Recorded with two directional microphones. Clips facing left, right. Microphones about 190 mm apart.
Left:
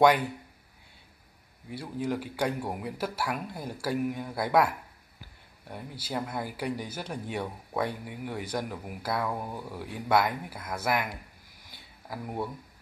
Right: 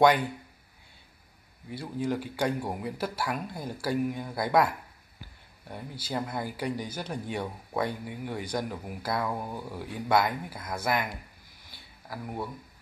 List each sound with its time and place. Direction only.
0.0 s speech: 5° left (ahead or behind)
1.7 s speech: 5° left (ahead or behind)
11.7 s a sound: 20° left (ahead or behind)